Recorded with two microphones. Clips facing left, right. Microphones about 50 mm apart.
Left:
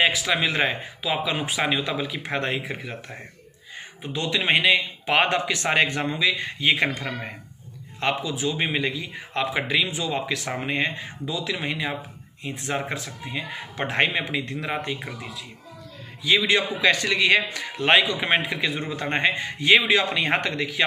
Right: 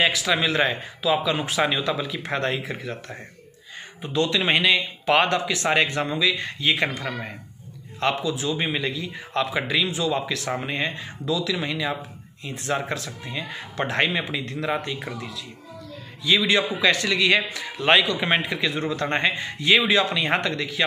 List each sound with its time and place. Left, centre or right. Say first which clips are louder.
0.4 s a man's voice: right 1 dB; left
16.3 s a man's voice: even; left
17.8 s speech: even; centre
18.4 s a man's voice: right 1 dB; left